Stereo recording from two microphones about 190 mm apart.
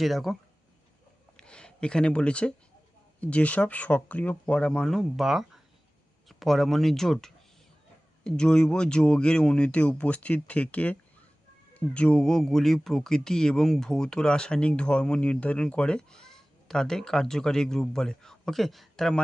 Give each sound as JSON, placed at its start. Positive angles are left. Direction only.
{"t": 0.0, "sound": "speech", "side_deg": 0}
{"t": 1.4, "sound": "a sound", "side_deg": 5}
{"t": 3.2, "sound": "speech", "side_deg": 5}